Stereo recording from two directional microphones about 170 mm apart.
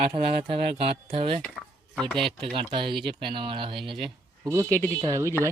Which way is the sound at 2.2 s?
30° right (ahead or behind).